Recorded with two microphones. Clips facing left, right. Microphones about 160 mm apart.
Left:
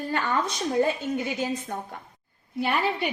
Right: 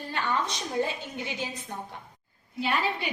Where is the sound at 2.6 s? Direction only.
55° left (ahead or behind).